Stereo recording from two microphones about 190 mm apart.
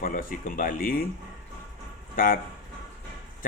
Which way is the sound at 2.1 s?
45° left (ahead or behind).